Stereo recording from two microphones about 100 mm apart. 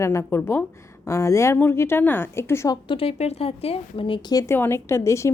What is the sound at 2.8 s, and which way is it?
A woman's voice, 70° left (ahead or behind).